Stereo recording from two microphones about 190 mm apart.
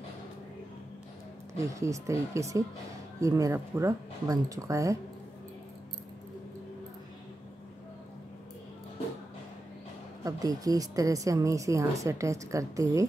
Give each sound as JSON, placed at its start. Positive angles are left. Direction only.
{"t": 1.6, "sound": "a woman's voice", "side_deg": -15}
{"t": 10.2, "sound": "a woman's voice", "side_deg": -20}